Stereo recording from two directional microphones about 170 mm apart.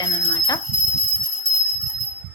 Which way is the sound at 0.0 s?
20° left (ahead or behind).